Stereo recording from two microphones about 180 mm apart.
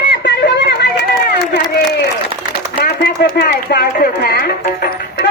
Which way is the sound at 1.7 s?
65° left (ahead or behind).